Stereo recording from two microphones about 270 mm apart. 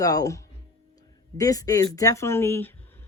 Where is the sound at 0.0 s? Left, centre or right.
Centre.